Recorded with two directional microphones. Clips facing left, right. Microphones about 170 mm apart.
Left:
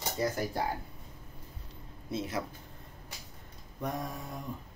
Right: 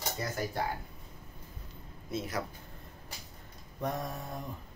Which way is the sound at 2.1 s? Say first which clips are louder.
Left 1 dB; 30° left (ahead or behind).